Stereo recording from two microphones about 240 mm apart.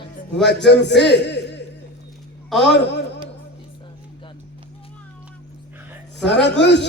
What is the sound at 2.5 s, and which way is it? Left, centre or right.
Speech, centre.